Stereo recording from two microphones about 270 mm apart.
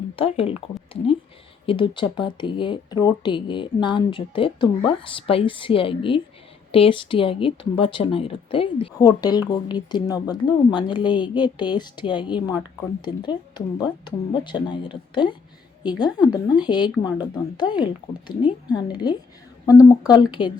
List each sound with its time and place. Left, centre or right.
0.2 s speech: left
1.6 s speech: centre